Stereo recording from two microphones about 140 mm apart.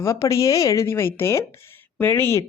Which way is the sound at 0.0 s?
20° left (ahead or behind).